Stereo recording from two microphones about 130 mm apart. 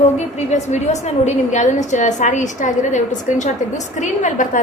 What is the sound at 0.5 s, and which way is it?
A woman's voice, 60° left (ahead or behind).